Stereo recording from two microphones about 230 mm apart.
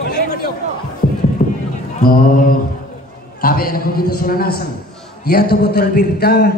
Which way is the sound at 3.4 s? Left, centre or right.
Left.